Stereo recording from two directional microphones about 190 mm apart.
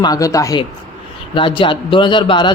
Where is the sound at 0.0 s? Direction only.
20° left (ahead or behind).